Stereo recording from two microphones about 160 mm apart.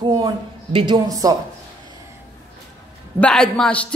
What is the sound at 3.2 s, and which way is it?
Speech, 5° left (ahead or behind).